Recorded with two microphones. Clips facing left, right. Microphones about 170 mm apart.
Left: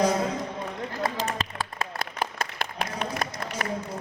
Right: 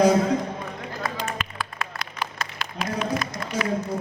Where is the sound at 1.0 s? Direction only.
35° left (ahead or behind).